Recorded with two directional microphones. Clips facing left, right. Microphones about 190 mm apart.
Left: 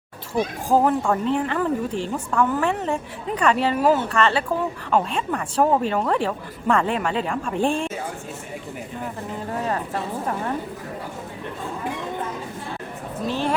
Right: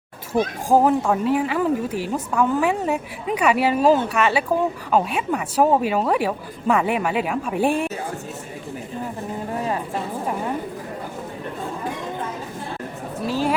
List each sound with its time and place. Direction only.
0.3 s speech: 10° right (ahead or behind)
3.8 s speech: 20° right (ahead or behind)
4.1 s speech: 10° right (ahead or behind)
9.5 s a sound: 15° right (ahead or behind)
13.2 s speech: 10° right (ahead or behind)